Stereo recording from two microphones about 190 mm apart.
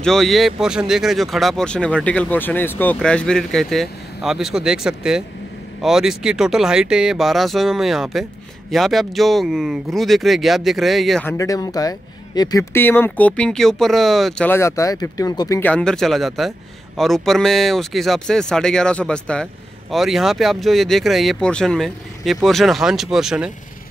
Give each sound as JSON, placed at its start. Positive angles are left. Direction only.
{"t": 0.0, "sound": "a man's voice", "side_deg": 0}
{"t": 11.2, "sound": "speech", "side_deg": 15}
{"t": 14.5, "sound": "speech", "side_deg": 15}
{"t": 15.7, "sound": "a man's voice", "side_deg": 5}